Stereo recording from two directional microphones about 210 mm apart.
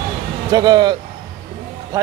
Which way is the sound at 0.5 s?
20° right (ahead or behind).